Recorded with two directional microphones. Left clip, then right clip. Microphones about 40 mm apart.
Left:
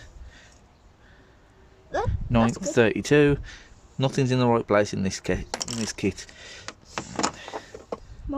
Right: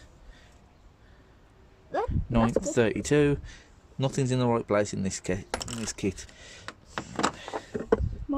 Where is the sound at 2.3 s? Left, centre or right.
Left.